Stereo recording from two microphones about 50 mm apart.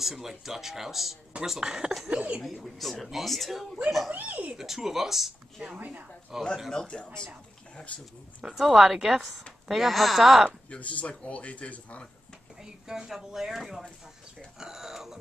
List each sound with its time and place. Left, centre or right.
0.0 s speech: centre
2.0 s speech: right
2.4 s speech: centre
4.1 s speech: right
4.6 s speech: centre
5.8 s speech: right
6.3 s speech: centre
6.7 s speech: centre
7.7 s speech: left
8.5 s speech: centre
10.7 s speech: left
12.6 s speech: centre